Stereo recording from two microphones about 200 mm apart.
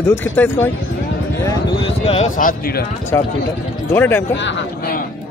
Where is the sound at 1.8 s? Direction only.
30° left (ahead or behind).